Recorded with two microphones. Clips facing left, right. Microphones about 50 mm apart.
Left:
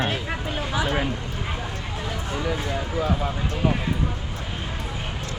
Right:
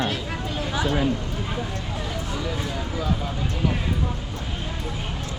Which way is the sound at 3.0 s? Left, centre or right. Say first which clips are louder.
Left 3 dB; left.